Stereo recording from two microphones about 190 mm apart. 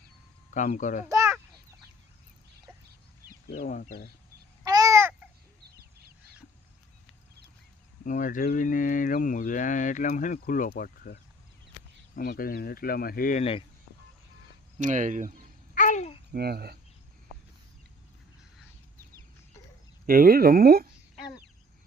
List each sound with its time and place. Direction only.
0.5 s speech: 40° left (ahead or behind)
1.0 s a sound: 15° right (ahead or behind)
3.6 s speech: 50° left (ahead or behind)
4.6 s babbling: 20° right (ahead or behind)
8.0 s speech: 45° left (ahead or behind)
13.4 s speech: 30° left (ahead or behind)
14.8 s speech: 40° right (ahead or behind)
15.7 s babbling: 40° left (ahead or behind)
16.3 s speech: 55° right (ahead or behind)
20.1 s speech: 50° right (ahead or behind)